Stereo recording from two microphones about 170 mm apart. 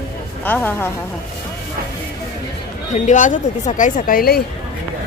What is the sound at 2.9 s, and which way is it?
Speech, 45° left (ahead or behind).